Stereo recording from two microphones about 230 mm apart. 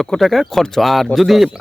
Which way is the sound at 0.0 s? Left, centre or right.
Centre.